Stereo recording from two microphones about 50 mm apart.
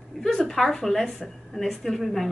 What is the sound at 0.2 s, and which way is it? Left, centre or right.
A woman's voice, centre.